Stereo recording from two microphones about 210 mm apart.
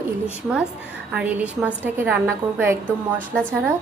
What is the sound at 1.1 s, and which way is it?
A woman's voice, 5° right (ahead or behind).